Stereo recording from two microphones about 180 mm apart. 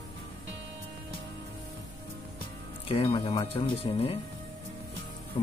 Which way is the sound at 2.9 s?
30° left (ahead or behind).